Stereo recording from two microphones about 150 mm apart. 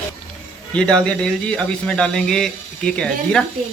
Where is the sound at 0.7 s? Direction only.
5° left (ahead or behind).